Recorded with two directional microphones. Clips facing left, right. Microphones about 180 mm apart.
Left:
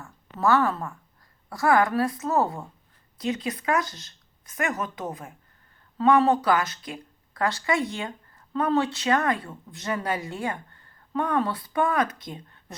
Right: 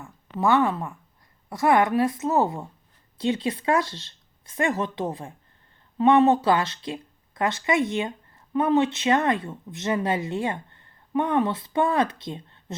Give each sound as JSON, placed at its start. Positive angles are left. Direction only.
{"t": 0.0, "sound": "speech", "side_deg": -15}